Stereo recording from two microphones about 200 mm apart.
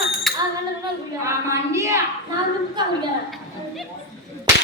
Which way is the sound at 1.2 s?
15° right (ahead or behind).